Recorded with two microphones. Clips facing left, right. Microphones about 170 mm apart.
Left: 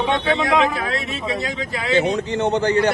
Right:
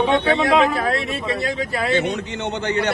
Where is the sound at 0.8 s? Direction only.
50° right (ahead or behind).